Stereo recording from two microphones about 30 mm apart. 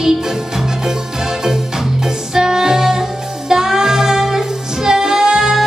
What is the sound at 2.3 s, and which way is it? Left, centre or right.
Music, centre.